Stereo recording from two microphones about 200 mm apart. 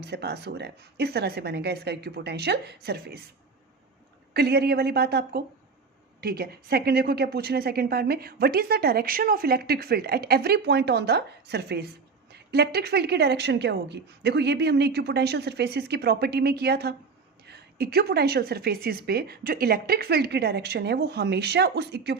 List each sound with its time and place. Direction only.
0.0 s a woman's voice: 55° right (ahead or behind)
4.4 s a woman's voice: 55° right (ahead or behind)